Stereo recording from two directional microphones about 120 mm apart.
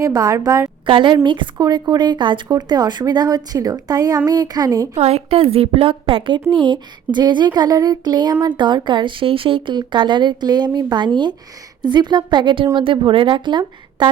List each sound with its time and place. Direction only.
0.0 s a woman's voice: 30° right (ahead or behind)
0.9 s a woman's voice: 40° right (ahead or behind)
4.9 s a woman's voice: 55° right (ahead or behind); by 14.1 s 40° right (ahead or behind)